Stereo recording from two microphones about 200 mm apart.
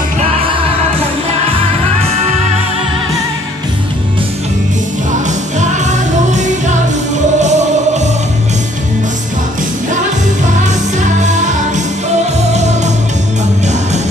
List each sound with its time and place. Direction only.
0.4 s music: 30° right (ahead or behind)
5.6 s music: 35° right (ahead or behind)